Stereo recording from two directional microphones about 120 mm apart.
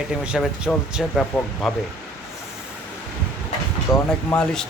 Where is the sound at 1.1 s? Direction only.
10° left (ahead or behind).